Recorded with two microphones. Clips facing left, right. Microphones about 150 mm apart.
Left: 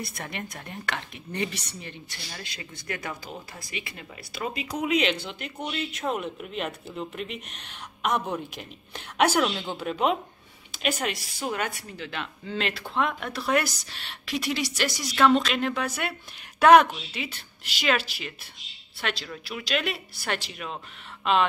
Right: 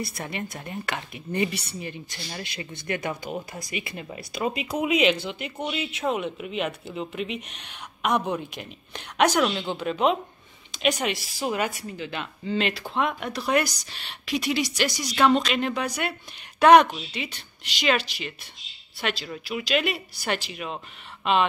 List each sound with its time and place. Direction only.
0.0 s speech: centre (ahead or behind)
2.3 s speech: 20° right (ahead or behind)
4.7 s a woman's voice: 10° right (ahead or behind)